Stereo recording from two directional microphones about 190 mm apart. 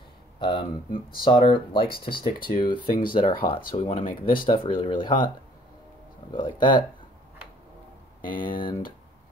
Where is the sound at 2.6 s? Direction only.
25° left (ahead or behind).